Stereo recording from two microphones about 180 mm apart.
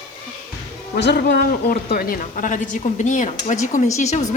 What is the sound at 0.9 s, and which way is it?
Speech, 70° left (ahead or behind).